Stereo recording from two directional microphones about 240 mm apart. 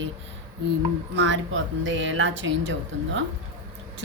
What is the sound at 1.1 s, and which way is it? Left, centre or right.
A woman's voice, right.